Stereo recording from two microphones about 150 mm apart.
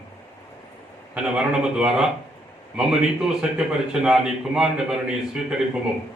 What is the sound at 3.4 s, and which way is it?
A man's voice, 5° right (ahead or behind).